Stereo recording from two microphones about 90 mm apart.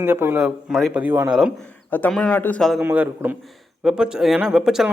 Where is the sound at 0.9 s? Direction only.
20° right (ahead or behind).